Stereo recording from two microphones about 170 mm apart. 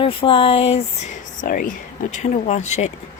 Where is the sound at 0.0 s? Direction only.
30° left (ahead or behind); by 1.7 s 55° left (ahead or behind).